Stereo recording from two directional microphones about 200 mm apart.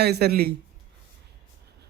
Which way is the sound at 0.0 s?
55° right (ahead or behind).